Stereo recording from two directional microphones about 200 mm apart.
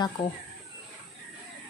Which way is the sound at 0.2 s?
25° left (ahead or behind).